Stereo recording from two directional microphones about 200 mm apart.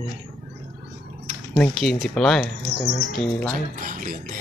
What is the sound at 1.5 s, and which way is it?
Speech, centre (ahead or behind).